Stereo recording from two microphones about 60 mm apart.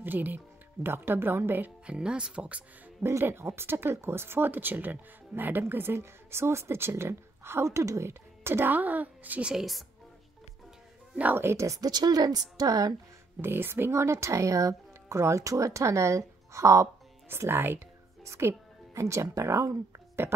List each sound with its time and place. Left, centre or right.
0.0 s a woman's voice: right
1.9 s speech: centre
3.0 s speech: right
8.1 s speech: right
9.5 s speech: centre
11.3 s speech: right
11.6 s a woman's voice: right
13.4 s speech: right
17.3 s a woman's voice: right
18.2 s speech: right
20.2 s speech: right